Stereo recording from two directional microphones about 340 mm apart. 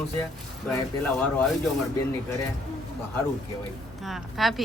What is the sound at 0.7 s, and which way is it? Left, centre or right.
Speech, centre.